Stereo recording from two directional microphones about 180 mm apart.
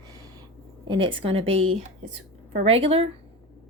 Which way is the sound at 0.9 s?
25° right (ahead or behind).